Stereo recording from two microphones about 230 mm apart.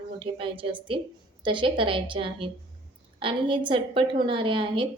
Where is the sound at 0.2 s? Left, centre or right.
Right.